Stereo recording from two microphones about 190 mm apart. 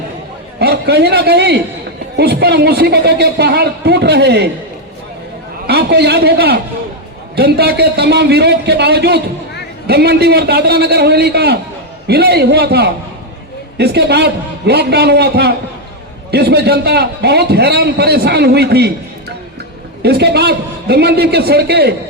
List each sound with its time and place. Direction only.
0.6 s a man's voice: 60° right (ahead or behind)
5.6 s a man's voice: 60° right (ahead or behind)
20.0 s a man's voice: 60° right (ahead or behind)